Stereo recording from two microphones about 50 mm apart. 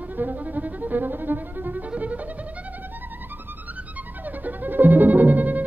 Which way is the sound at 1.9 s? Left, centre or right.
Right.